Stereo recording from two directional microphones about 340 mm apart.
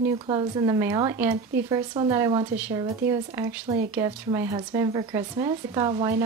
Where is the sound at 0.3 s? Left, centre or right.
Centre.